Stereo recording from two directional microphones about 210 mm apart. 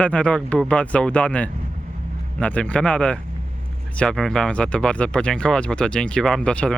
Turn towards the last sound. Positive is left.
turn(degrees=5)  # may be behind; listen again after turning